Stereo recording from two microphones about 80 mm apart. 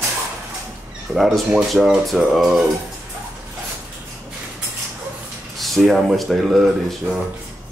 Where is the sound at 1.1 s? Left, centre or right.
Centre.